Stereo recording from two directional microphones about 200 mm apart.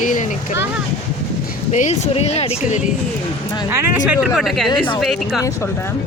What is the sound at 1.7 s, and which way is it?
Speech, 35° left (ahead or behind).